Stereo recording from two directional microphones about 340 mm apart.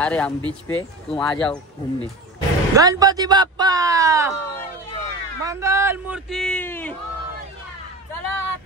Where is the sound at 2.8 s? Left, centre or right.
Centre.